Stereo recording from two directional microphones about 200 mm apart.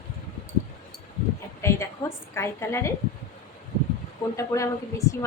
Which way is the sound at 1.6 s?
15° left (ahead or behind).